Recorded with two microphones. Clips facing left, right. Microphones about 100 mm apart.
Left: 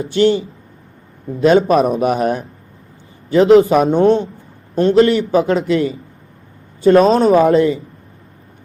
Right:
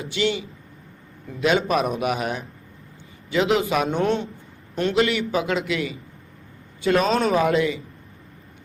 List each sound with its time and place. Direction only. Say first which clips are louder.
0.0 s a man's voice: left 10 dB; 35° left (ahead or behind)